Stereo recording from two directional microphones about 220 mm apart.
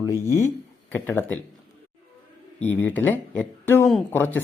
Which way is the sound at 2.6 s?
10° left (ahead or behind).